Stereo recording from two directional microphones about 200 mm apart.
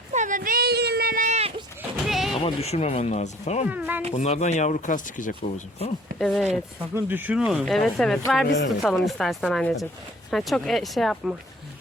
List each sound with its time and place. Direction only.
0.1 s a sound: 40° right (ahead or behind)
2.0 s a sound: centre (ahead or behind)
2.4 s speech: 30° left (ahead or behind)
3.7 s speech: 10° right (ahead or behind)
4.1 s speech: 35° left (ahead or behind)
6.1 s speech: 5° left (ahead or behind)
6.9 s speech: 10° right (ahead or behind)